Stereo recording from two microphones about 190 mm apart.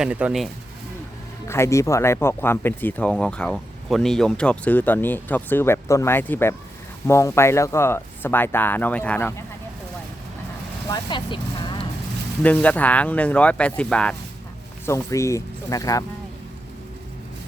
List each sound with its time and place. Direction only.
0.0 s speech: 5° right (ahead or behind)
1.5 s speech: 15° left (ahead or behind)
10.8 s vehicle: 25° left (ahead or behind)
12.4 s speech: 10° left (ahead or behind)